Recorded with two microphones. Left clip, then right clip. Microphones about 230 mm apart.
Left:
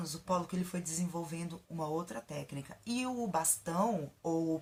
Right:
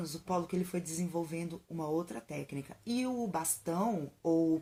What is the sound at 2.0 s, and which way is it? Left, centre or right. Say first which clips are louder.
Speech: right 2 dB; left.